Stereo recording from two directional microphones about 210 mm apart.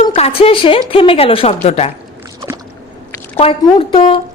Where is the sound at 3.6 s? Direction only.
25° left (ahead or behind).